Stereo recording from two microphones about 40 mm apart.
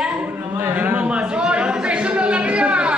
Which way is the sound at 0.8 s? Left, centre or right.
Right.